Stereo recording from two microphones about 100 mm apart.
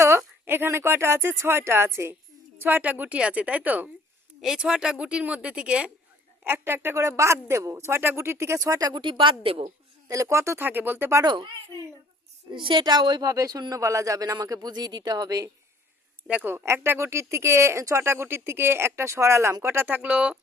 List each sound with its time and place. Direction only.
0.0 s a woman's voice: 25° right (ahead or behind)
4.4 s a woman's voice: 5° right (ahead or behind)
6.4 s speech: 20° right (ahead or behind)
9.0 s a woman's voice: 55° right (ahead or behind)
10.1 s speech: 30° right (ahead or behind)
11.2 s speech: 45° right (ahead or behind)
16.2 s a woman's voice: 15° right (ahead or behind)